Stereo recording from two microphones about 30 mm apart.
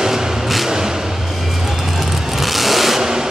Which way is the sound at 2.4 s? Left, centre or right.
Centre.